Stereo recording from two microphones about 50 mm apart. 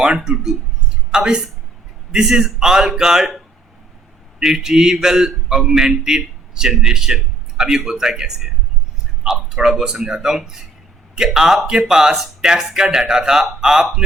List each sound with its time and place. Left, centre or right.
0.0 s a man's voice: centre
4.4 s a man's voice: centre